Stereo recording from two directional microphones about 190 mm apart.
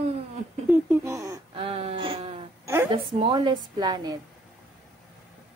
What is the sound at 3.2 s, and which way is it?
Speech, 25° right (ahead or behind).